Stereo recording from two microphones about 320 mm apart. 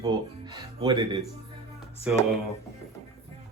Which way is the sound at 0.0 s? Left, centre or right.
Centre.